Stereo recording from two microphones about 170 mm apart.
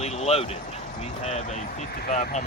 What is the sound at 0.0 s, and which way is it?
Speech, 40° left (ahead or behind).